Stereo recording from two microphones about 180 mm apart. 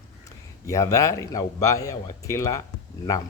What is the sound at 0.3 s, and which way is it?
A man's voice, 15° left (ahead or behind).